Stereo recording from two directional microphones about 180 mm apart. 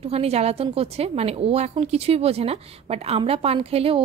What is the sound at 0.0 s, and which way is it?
Speech, 35° right (ahead or behind).